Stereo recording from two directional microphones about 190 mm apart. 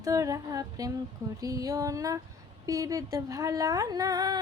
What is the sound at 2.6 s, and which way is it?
Female singing, 20° right (ahead or behind).